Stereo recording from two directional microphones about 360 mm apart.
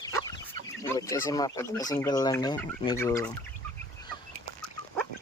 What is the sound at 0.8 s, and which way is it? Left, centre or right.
Speech, centre.